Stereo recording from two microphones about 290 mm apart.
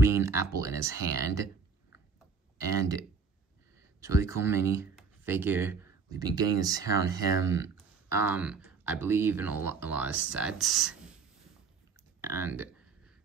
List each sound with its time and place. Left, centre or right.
0.0 s speech: centre
2.7 s speech: centre
12.2 s speech: centre